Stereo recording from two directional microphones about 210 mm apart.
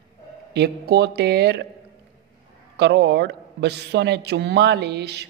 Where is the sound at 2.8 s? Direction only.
55° right (ahead or behind).